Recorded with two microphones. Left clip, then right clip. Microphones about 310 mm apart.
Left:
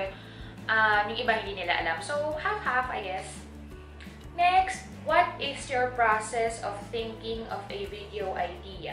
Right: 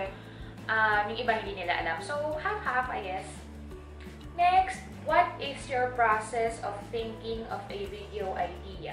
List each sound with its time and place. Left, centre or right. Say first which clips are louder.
0.7 s a woman's voice: left 2 dB; centre
4.5 s a woman's voice: left 1 dB; centre